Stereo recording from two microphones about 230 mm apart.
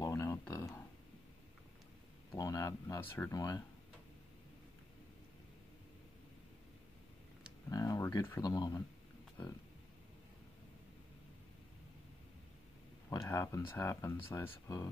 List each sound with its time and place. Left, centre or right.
0.0 s a sound: centre
2.3 s speech: centre
7.7 s speech: centre
13.1 s speech: centre